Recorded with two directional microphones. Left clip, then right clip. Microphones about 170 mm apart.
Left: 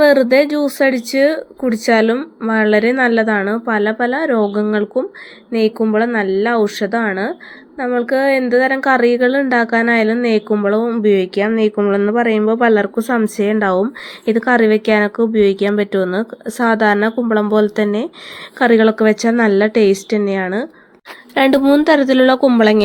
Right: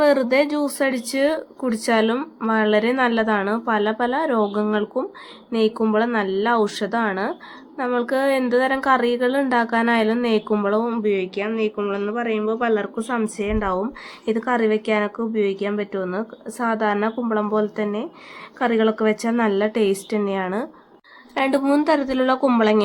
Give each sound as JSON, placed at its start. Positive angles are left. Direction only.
{"t": 0.0, "sound": "a woman's voice", "side_deg": 20}
{"t": 11.0, "sound": "speech", "side_deg": 35}
{"t": 21.3, "sound": "a woman's voice", "side_deg": 40}